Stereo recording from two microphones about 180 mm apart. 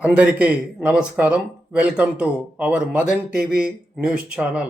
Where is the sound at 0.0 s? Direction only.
5° right (ahead or behind).